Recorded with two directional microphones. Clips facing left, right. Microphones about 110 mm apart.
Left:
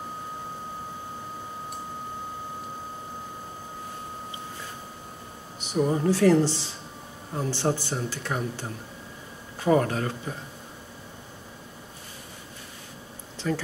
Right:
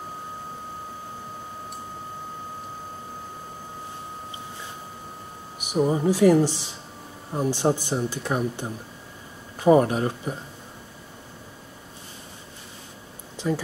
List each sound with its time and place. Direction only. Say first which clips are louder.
5.6 s speech: right 2 dB; 10° right (ahead or behind)
13.4 s speech: right 2 dB; 15° right (ahead or behind)